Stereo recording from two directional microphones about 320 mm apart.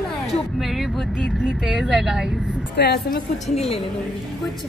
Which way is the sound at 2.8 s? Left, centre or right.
Left.